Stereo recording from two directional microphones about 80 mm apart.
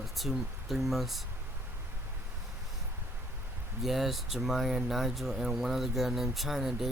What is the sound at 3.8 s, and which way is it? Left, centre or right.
Speech, centre.